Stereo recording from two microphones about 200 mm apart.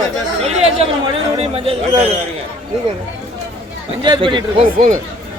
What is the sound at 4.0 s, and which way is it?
Speech, 25° right (ahead or behind).